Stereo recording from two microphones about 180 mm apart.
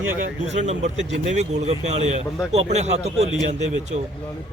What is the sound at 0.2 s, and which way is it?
Speech, 40° right (ahead or behind).